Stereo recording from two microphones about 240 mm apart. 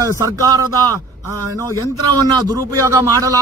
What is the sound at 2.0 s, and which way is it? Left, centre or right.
Speech, left.